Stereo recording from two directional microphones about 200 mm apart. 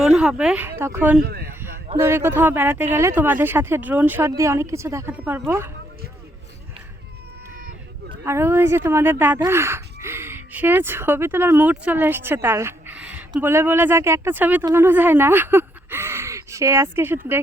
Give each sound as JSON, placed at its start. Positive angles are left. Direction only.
{"t": 0.0, "sound": "speech", "side_deg": -5}
{"t": 1.2, "sound": "speech", "side_deg": -50}
{"t": 2.0, "sound": "speech", "side_deg": -10}
{"t": 8.2, "sound": "speech", "side_deg": -15}